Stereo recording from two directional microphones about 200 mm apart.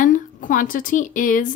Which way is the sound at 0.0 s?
40° left (ahead or behind).